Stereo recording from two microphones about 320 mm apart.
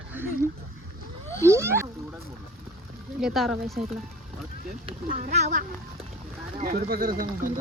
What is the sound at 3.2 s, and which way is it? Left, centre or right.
Speech, centre.